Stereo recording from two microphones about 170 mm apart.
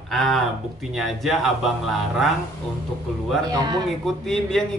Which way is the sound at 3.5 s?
20° right (ahead or behind).